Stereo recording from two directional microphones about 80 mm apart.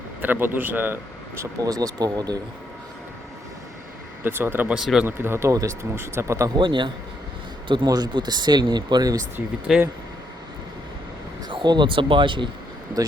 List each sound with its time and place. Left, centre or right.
0.2 s a man's voice: right
1.6 s speech: right
4.2 s a man's voice: right
4.7 s speech: centre
5.0 s speech: right
6.6 s a man's voice: right
7.9 s speech: right
9.7 s speech: centre
11.4 s speech: right
13.0 s speech: right